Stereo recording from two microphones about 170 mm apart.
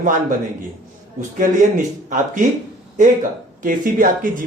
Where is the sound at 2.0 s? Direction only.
50° right (ahead or behind).